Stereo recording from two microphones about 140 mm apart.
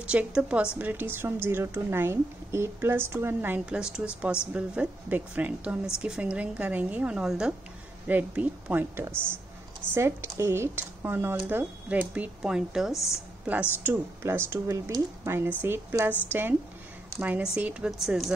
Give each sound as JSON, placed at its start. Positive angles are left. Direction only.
{"t": 0.1, "sound": "speech", "side_deg": -10}